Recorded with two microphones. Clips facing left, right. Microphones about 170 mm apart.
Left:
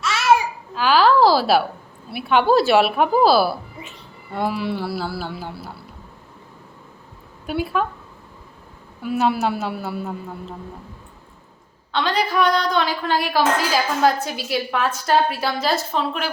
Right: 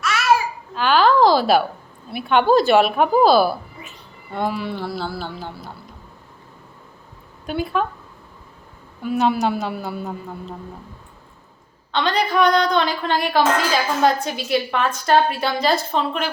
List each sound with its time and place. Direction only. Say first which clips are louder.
0.0 s babbling: left 1 dB; 25° left (ahead or behind)
0.7 s a sound: even; 5° left (ahead or behind)
2.0 s a woman's voice: right 1 dB; 5° left (ahead or behind)
7.4 s a woman's voice: even; 5° left (ahead or behind)
9.0 s a woman's voice: right 1 dB; 5° left (ahead or behind)
11.9 s a woman's voice: right 1 dB; 5° left (ahead or behind)